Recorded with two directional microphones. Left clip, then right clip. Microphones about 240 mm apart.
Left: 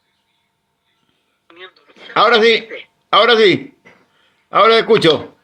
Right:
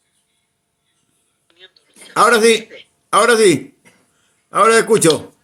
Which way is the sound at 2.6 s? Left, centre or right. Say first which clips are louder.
Left 8 dB; centre.